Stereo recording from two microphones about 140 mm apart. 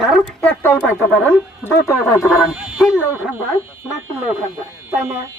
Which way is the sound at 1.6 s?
20° left (ahead or behind).